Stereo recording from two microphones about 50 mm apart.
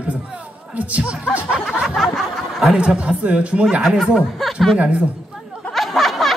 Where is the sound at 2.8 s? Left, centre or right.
Right.